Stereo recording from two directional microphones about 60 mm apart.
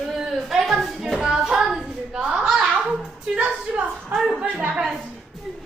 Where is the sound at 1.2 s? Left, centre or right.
Centre.